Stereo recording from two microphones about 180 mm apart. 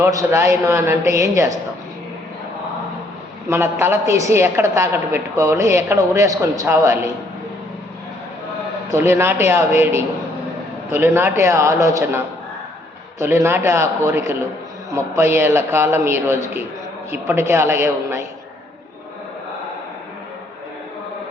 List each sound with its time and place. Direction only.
0.0 s a woman's voice: 15° right (ahead or behind)
3.5 s a woman's voice: 15° right (ahead or behind)
8.9 s a woman's voice: 15° right (ahead or behind)